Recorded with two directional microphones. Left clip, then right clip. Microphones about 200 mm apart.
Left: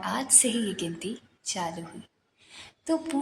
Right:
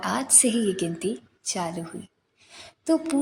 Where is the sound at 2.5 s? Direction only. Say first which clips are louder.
Right 5 dB; 20° right (ahead or behind).